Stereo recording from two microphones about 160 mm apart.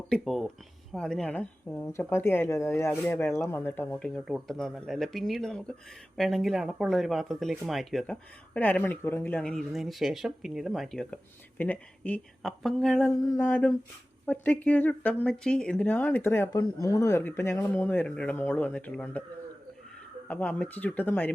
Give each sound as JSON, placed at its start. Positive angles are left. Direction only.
{"t": 0.1, "sound": "speech", "side_deg": 0}
{"t": 12.4, "sound": "speech", "side_deg": 0}
{"t": 13.1, "sound": "a sound", "side_deg": 20}
{"t": 13.5, "sound": "speech", "side_deg": 10}
{"t": 20.2, "sound": "speech", "side_deg": 10}